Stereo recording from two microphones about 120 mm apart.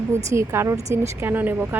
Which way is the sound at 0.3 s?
20° right (ahead or behind).